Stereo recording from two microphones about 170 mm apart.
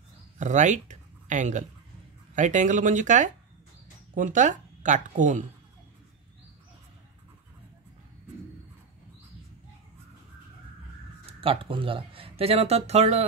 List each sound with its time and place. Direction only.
0.4 s speech: 45° right (ahead or behind)
11.2 s speech: 35° right (ahead or behind)